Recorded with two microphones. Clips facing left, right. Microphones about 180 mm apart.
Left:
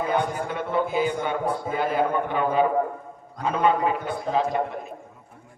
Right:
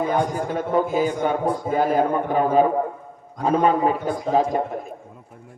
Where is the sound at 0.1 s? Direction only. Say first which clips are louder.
Right 3 dB; 40° right (ahead or behind).